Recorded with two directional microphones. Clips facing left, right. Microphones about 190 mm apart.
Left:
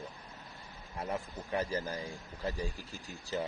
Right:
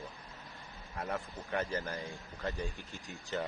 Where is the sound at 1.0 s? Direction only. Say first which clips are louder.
Left 1 dB; 15° left (ahead or behind).